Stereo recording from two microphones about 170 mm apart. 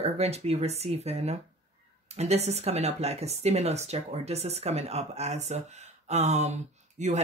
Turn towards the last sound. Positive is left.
turn(degrees=-40)  # may be behind; listen again after turning